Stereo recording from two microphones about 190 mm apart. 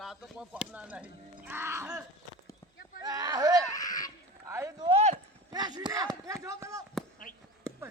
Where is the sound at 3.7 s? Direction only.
20° left (ahead or behind).